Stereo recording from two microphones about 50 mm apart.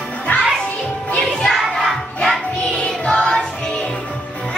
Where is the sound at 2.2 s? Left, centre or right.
Centre.